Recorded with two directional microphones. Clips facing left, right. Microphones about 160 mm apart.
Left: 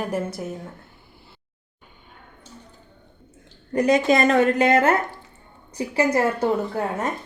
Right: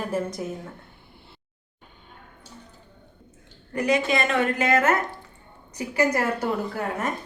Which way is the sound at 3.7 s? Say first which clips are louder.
Left 5 dB; 40° left (ahead or behind).